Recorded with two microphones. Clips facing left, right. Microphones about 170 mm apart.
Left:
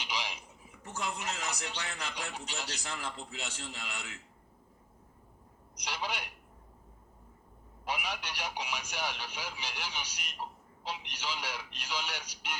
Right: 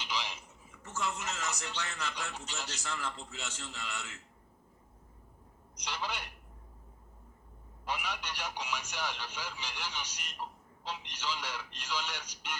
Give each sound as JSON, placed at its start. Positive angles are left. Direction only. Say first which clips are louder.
{"t": 0.0, "sound": "a man's voice", "louder": "even", "side_deg": 10}
{"t": 5.7, "sound": "a man's voice", "louder": "left 1 dB", "side_deg": 10}
{"t": 7.9, "sound": "a man's voice", "louder": "left 1 dB", "side_deg": 10}